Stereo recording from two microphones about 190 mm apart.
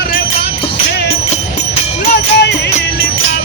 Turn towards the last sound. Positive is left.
turn(degrees=60)  # may be behind; listen again after turning